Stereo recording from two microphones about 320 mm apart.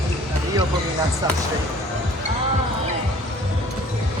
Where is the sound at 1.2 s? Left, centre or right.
Centre.